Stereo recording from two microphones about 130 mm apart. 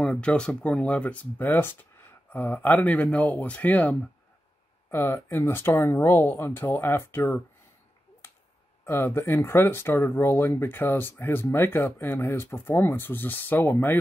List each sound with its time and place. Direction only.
0.0 s speech: 10° left (ahead or behind)
4.9 s speech: 20° left (ahead or behind)
8.2 s a sound: 20° left (ahead or behind)
8.8 s speech: 20° left (ahead or behind)